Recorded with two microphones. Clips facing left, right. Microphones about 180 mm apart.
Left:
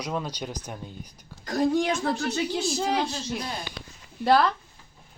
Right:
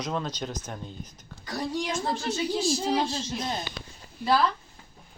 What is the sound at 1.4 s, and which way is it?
Speech, 50° left (ahead or behind).